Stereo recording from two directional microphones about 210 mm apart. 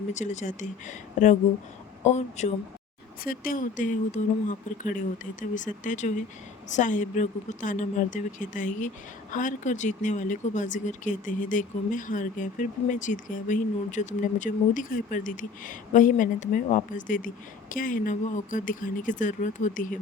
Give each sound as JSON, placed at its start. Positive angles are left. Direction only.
{"t": 0.1, "sound": "speech", "side_deg": 35}